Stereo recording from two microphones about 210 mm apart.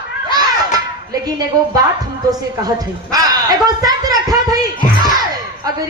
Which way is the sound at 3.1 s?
20° right (ahead or behind).